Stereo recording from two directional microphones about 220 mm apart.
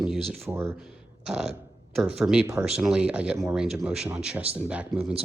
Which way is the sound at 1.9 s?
Centre (ahead or behind).